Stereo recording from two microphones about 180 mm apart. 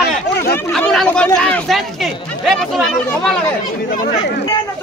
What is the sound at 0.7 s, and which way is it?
Speech, 5° left (ahead or behind).